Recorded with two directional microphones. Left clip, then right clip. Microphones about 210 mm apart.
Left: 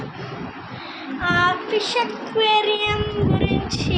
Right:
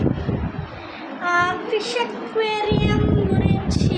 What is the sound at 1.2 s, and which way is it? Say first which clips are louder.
Child singing: left 1 dB; 10° right (ahead or behind).